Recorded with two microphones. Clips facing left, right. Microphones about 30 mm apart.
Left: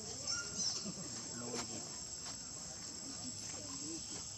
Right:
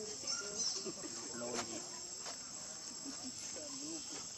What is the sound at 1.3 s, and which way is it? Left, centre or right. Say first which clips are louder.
Snake: right 3 dB; centre.